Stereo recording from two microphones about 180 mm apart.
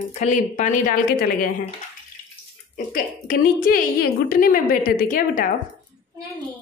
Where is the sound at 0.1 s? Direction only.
40° left (ahead or behind).